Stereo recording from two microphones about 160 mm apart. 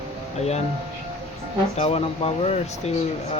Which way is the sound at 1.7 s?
40° left (ahead or behind).